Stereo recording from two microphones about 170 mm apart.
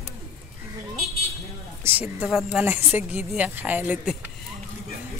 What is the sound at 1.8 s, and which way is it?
Speech, 15° right (ahead or behind).